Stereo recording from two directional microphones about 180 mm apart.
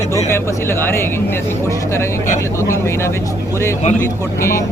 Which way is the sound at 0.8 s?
15° left (ahead or behind).